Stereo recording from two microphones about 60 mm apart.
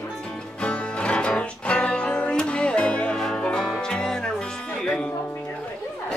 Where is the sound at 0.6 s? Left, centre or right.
Centre.